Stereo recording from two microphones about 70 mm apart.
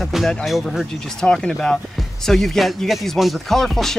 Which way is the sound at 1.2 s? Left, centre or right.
Centre.